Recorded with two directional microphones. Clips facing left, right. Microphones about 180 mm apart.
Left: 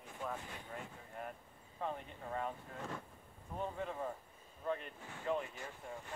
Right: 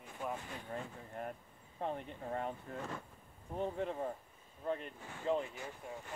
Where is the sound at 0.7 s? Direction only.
35° right (ahead or behind).